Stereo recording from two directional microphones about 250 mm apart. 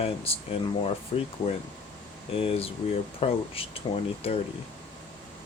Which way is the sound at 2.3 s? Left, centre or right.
Left.